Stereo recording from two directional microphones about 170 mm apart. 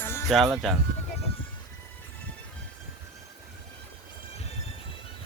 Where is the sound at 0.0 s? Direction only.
15° left (ahead or behind).